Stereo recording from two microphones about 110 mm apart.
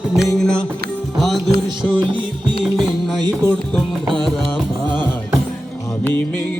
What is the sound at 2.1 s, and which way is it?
Music, 45° right (ahead or behind).